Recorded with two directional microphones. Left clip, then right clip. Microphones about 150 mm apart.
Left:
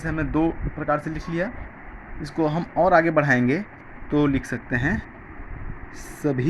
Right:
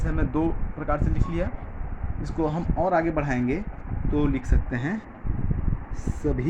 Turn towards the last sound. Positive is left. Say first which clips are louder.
# left 3 dB
turn(degrees=35)  # may be behind; listen again after turning